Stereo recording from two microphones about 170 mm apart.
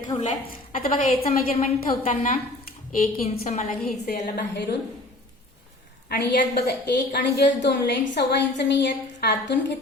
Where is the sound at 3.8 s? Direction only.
60° left (ahead or behind).